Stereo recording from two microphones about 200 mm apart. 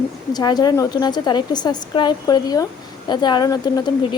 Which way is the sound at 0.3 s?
20° left (ahead or behind).